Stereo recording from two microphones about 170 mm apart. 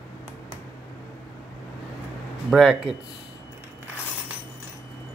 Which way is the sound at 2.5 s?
Centre (ahead or behind).